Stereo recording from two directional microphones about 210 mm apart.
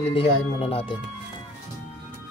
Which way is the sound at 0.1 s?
25° left (ahead or behind).